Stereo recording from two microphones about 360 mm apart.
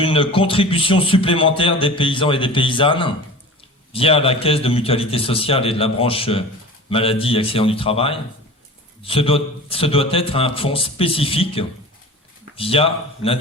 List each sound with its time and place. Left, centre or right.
0.0 s a man's voice: centre